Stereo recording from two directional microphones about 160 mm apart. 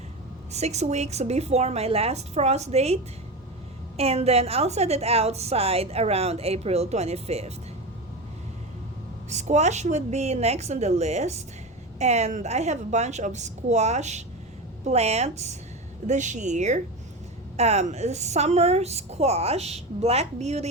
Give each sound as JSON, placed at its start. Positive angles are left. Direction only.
{"t": 0.5, "sound": "a woman's voice", "side_deg": -45}
{"t": 9.3, "sound": "a woman's voice", "side_deg": -45}